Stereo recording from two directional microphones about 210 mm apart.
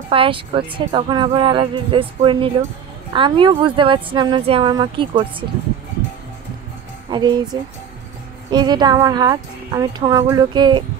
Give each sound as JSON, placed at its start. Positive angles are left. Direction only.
{"t": 0.1, "sound": "speech", "side_deg": -25}
{"t": 7.1, "sound": "speech", "side_deg": -20}
{"t": 8.5, "sound": "speech", "side_deg": -20}